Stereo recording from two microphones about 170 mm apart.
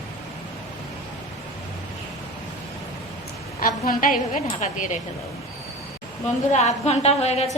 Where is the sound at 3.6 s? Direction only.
55° left (ahead or behind).